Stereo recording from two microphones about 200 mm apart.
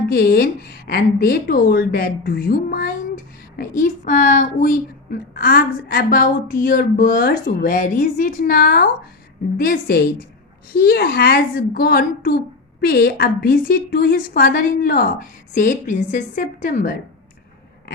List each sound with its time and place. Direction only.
0.1 s a woman's voice: 50° left (ahead or behind)